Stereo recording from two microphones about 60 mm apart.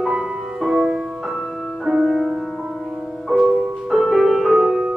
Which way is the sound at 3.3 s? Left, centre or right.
Centre.